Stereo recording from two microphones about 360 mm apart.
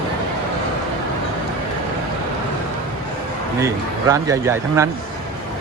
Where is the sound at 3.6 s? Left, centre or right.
Centre.